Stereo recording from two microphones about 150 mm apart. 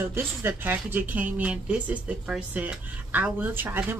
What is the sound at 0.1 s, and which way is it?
Speech, 15° right (ahead or behind).